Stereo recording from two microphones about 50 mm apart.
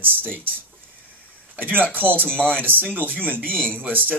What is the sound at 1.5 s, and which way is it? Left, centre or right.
Speech, right.